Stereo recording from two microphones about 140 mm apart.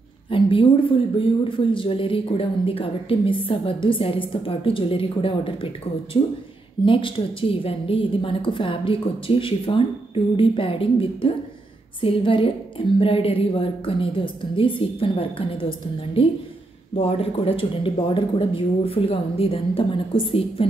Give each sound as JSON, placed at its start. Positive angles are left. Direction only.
{"t": 0.3, "sound": "a woman's voice", "side_deg": 40}